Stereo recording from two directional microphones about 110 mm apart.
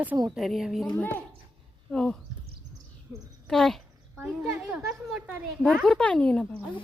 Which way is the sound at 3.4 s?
5° left (ahead or behind).